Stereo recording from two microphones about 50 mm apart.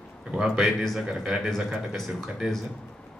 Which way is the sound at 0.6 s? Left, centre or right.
Centre.